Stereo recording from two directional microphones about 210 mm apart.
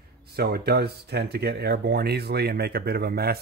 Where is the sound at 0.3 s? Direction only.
50° right (ahead or behind).